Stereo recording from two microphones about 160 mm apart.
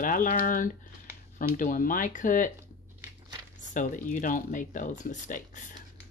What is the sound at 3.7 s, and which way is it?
Speech, 55° left (ahead or behind).